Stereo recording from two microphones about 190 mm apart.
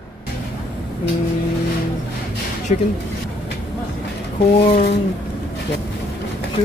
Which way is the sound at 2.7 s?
40° left (ahead or behind).